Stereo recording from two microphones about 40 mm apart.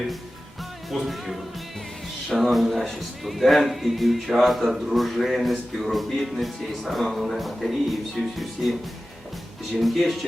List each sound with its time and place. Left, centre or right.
0.9 s speech: centre
9.8 s speech: centre